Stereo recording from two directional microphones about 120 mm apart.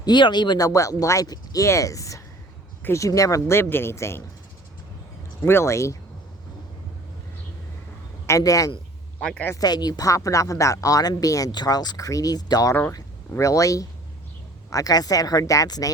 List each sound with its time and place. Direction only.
0.0 s speech: 40° left (ahead or behind); by 4.2 s 20° left (ahead or behind)
5.4 s speech: 20° left (ahead or behind)
8.3 s speech: 30° left (ahead or behind)
9.2 s speech: 10° left (ahead or behind)
9.5 s speech: 35° left (ahead or behind)
12.7 s speech: 20° left (ahead or behind)